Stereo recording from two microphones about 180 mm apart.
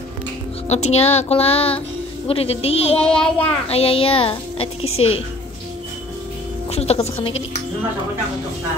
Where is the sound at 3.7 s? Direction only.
30° left (ahead or behind).